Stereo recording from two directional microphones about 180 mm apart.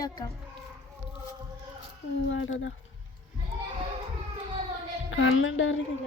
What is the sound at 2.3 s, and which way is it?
Speech, 90° left.